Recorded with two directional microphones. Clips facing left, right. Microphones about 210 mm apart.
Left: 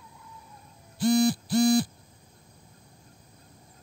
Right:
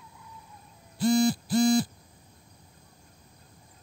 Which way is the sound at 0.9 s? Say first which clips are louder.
Left 1 dB; 65° left (ahead or behind).